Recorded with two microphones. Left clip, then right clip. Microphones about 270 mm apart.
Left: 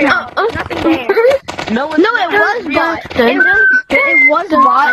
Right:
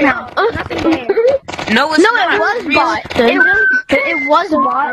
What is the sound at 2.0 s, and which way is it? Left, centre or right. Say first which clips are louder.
Speech: left 1 dB; centre.